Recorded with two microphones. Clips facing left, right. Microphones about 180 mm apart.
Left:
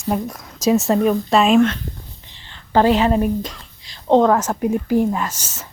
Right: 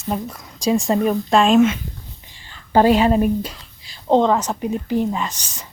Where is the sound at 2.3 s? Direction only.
15° right (ahead or behind).